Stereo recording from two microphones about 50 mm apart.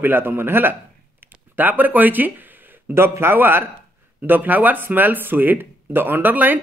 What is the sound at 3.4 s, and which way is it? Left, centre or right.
Speech, right.